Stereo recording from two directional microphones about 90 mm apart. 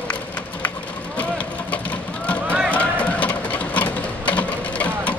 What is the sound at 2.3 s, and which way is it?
Run, 15° left (ahead or behind).